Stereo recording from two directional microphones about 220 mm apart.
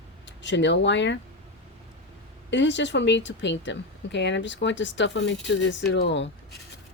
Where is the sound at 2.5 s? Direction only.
55° left (ahead or behind).